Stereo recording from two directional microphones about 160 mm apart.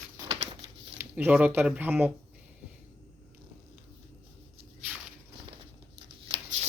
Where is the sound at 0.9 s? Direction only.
10° right (ahead or behind).